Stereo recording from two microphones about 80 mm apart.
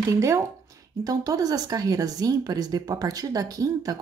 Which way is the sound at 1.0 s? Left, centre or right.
Right.